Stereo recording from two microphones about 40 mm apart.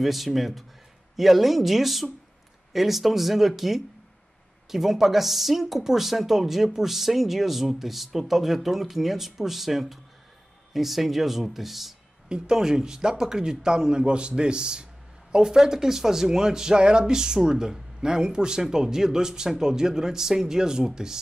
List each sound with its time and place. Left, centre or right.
0.0 s speech: centre
12.3 s speech: centre